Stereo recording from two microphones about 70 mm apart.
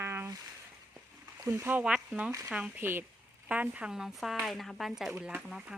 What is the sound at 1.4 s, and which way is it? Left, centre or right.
Speech, right.